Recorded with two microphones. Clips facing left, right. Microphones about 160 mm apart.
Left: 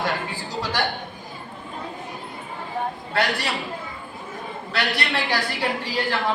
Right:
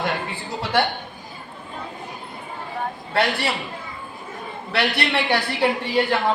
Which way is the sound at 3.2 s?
25° right (ahead or behind).